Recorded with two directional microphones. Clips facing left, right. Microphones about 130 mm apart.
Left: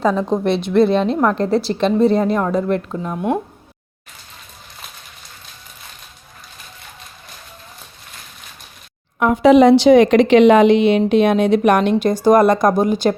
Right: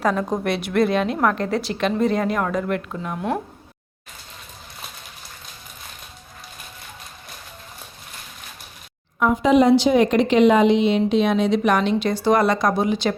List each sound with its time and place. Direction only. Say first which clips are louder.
0.2 s a woman's voice: left 5 dB; 25° left (ahead or behind)
9.1 s speech: left 5 dB; 70° left (ahead or behind); by 13.1 s 45° left (ahead or behind)